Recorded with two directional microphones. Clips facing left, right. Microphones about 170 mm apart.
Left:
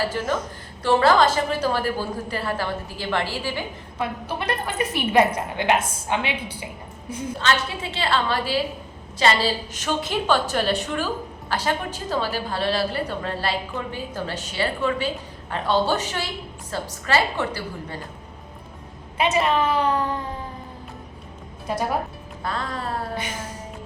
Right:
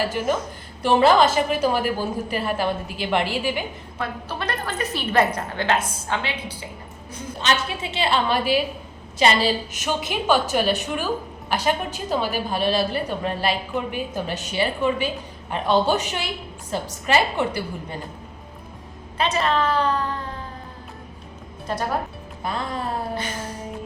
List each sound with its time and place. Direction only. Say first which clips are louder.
0.1 s a woman's voice: right 2 dB; 10° right (ahead or behind)
3.9 s a woman's voice: left 2 dB; 15° left (ahead or behind)
7.3 s a woman's voice: right 1 dB; 20° right (ahead or behind)
19.1 s a woman's voice: left 1 dB; 15° left (ahead or behind)
22.4 s a woman's voice: right 1 dB; 20° right (ahead or behind)